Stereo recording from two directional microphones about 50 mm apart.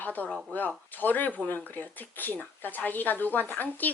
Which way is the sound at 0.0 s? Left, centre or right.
Left.